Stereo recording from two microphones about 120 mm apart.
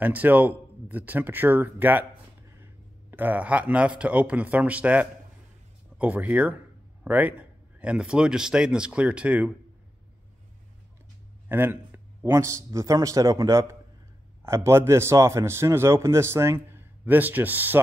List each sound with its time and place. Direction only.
0.0 s speech: 15° right (ahead or behind)
11.4 s a man's voice: 15° right (ahead or behind)